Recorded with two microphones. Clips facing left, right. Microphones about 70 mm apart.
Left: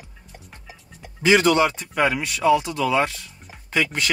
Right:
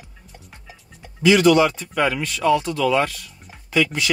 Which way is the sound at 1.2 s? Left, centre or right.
Left.